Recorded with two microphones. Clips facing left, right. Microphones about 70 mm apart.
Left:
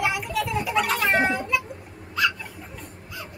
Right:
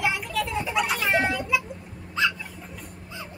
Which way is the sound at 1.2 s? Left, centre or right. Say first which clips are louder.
Left 2 dB; left.